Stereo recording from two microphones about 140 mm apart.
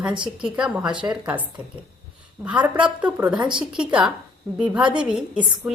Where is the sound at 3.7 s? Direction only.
5° right (ahead or behind).